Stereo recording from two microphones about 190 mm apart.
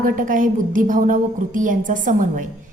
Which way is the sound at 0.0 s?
45° right (ahead or behind).